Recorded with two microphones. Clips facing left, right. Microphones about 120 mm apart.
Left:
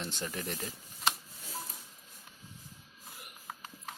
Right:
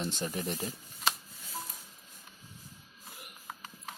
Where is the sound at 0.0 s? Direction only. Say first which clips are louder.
Right 4 dB; 20° right (ahead or behind).